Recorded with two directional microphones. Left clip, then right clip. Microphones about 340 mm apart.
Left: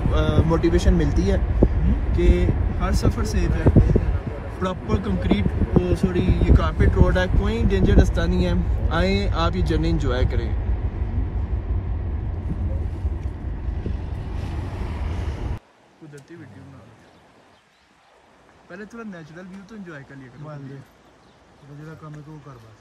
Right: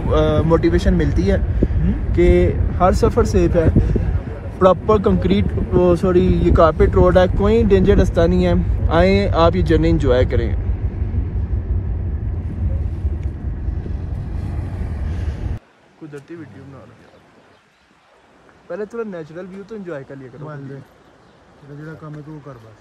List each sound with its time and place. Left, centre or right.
0.1 s speech: centre
13.8 s vehicle: centre
18.9 s speech: centre
21.8 s speech: centre